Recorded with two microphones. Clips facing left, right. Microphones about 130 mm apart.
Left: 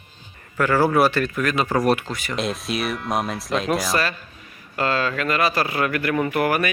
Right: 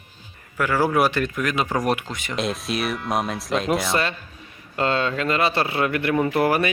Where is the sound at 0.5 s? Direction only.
10° right (ahead or behind).